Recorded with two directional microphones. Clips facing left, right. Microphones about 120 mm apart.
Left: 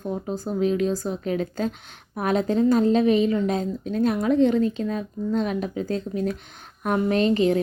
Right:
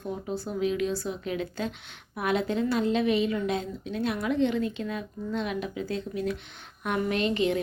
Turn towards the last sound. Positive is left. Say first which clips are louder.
# left 6 dB
turn(degrees=35)  # may be behind; listen again after turning